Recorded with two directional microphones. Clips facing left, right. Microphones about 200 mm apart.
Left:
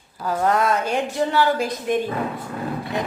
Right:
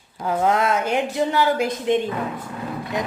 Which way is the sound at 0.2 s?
15° right (ahead or behind).